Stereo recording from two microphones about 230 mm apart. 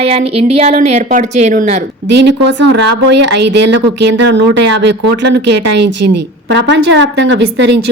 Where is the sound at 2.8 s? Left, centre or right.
Right.